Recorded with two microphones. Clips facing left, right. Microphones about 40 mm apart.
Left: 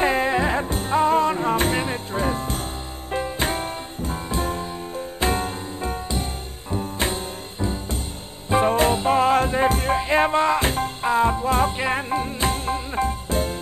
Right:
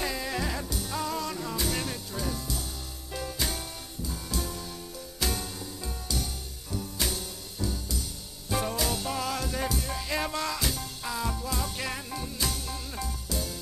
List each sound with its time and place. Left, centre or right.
0.0 s music: left